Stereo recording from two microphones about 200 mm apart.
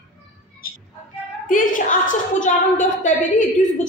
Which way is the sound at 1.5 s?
40° left (ahead or behind).